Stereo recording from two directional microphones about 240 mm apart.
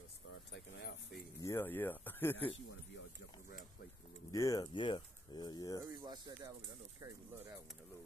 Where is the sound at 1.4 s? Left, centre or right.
Centre.